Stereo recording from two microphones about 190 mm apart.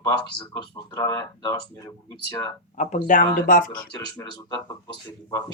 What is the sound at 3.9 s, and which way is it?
Speech, 20° left (ahead or behind).